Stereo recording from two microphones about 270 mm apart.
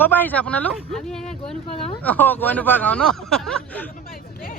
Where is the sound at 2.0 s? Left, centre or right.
Centre.